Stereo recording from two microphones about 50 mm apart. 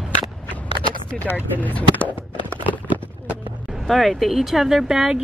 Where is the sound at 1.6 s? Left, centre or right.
Left.